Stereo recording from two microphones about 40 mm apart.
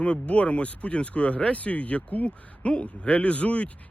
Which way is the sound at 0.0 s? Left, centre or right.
Left.